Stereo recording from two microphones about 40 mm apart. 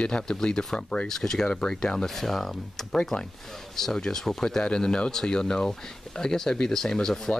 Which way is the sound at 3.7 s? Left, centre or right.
Centre.